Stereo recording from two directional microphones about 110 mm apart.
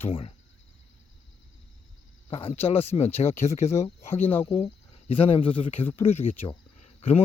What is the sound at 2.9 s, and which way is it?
Speech, 45° left (ahead or behind).